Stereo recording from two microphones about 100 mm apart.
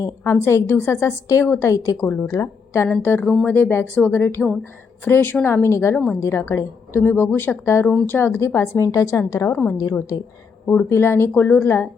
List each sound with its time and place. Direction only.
0.3 s a woman's voice: 25° left (ahead or behind)
9.5 s a woman's voice: 20° left (ahead or behind)